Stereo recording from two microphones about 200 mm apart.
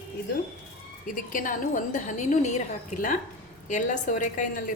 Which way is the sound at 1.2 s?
40° left (ahead or behind).